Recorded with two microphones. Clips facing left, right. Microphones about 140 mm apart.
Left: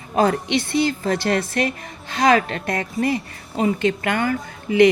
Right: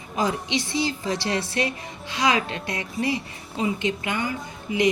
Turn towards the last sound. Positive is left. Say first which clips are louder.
# left 8 dB
turn(degrees=65)  # may be behind; listen again after turning